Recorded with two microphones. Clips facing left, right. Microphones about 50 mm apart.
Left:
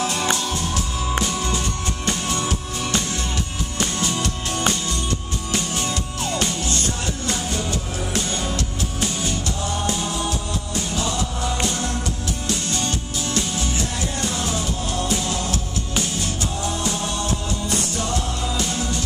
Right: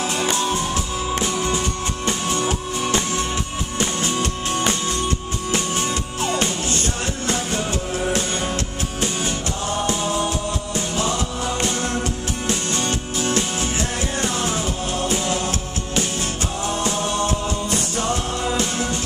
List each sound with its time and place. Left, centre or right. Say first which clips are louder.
0.0 s music: right 1 dB; right
12.4 s music: right 2 dB; right